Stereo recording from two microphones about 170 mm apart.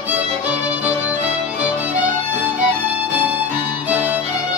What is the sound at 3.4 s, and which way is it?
Music, 10° right (ahead or behind).